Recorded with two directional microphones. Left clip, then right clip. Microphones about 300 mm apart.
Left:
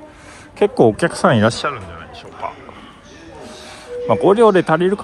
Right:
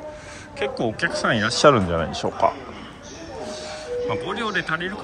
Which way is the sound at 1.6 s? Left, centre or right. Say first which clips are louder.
Right 8 dB; centre.